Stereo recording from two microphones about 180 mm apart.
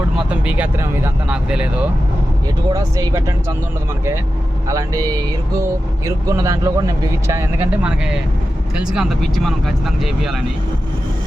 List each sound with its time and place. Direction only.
0.3 s speech: 5° right (ahead or behind)
2.6 s speech: 20° right (ahead or behind)
4.7 s speech: 20° right (ahead or behind); by 10.4 s centre (ahead or behind)